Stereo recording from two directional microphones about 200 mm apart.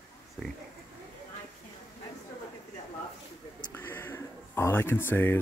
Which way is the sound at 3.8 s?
10° left (ahead or behind).